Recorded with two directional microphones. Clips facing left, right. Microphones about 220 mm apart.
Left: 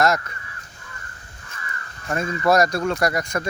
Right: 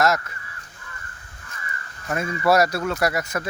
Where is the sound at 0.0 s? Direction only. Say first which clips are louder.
Left 1 dB; centre (ahead or behind).